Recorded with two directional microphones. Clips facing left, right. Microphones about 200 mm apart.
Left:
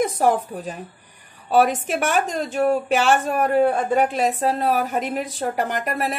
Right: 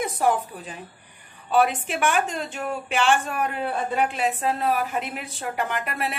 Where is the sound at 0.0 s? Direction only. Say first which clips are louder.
Left 4 dB; 40° left (ahead or behind).